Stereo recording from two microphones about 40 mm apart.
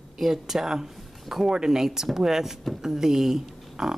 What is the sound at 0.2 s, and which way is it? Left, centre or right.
Speech, centre.